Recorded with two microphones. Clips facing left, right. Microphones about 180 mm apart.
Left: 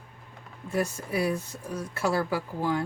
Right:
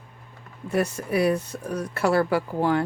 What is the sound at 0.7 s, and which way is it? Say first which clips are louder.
Speech: right 5 dB; 70° right (ahead or behind).